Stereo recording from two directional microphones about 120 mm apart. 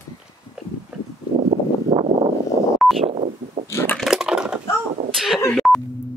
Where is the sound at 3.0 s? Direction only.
50° right (ahead or behind).